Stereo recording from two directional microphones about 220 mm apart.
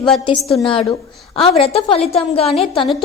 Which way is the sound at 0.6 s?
25° left (ahead or behind).